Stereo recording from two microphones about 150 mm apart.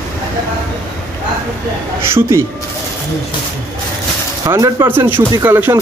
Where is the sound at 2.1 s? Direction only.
15° right (ahead or behind).